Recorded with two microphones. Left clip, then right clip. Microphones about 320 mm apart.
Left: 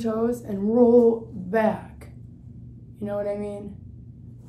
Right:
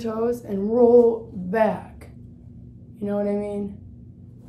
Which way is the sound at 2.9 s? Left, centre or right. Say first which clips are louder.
Right 2 dB; centre.